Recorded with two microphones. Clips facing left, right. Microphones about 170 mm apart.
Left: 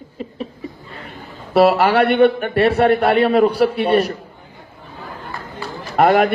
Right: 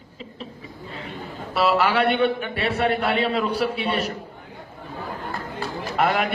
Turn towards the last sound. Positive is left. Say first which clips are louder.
# left 8 dB
turn(degrees=55)  # may be behind; listen again after turning